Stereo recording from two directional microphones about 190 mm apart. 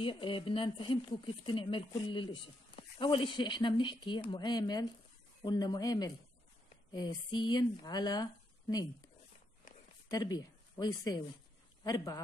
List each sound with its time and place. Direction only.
0.0 s speech: 25° left (ahead or behind)
10.0 s speech: 20° left (ahead or behind)